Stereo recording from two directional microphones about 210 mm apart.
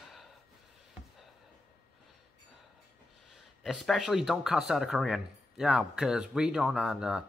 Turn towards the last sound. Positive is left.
turn(degrees=-5)  # may be behind; listen again after turning